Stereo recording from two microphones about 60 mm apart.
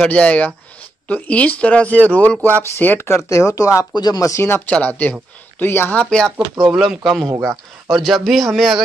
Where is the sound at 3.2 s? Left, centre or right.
Left.